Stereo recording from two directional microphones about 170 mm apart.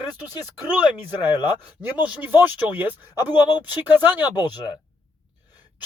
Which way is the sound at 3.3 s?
25° left (ahead or behind).